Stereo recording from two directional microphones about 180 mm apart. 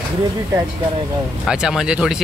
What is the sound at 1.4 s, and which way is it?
Speech, 5° right (ahead or behind).